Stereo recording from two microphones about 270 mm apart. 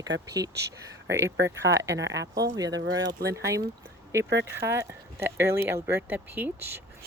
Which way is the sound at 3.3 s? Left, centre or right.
Centre.